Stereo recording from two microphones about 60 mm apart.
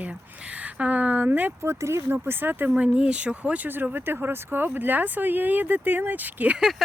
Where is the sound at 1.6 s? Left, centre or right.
Right.